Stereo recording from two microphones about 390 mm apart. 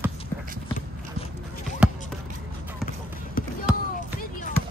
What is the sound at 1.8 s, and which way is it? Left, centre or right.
Basketball bounce, centre.